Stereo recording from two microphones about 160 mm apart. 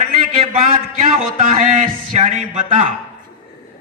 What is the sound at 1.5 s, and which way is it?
Speech, 45° right (ahead or behind).